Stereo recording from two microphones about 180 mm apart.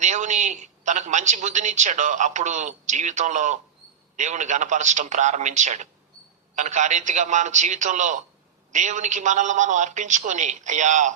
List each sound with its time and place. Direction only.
0.0 s a woman's voice: 40° right (ahead or behind)